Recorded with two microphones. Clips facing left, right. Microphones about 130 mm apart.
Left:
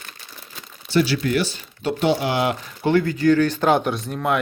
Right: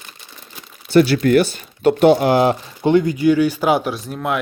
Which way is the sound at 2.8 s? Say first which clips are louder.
Right 3 dB; 15° right (ahead or behind).